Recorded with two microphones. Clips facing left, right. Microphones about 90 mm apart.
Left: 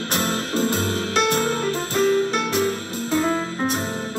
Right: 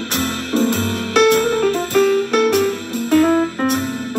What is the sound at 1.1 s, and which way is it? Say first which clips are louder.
Music: right 9 dB; 70° right (ahead or behind).